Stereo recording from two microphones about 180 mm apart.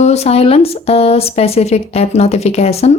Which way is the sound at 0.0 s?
35° left (ahead or behind).